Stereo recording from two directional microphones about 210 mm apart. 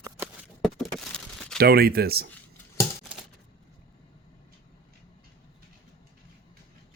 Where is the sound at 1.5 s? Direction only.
50° right (ahead or behind).